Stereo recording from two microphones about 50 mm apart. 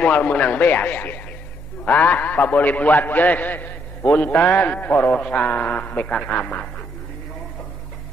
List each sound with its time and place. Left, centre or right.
0.0 s a man's voice: left
5.1 s a man's voice: left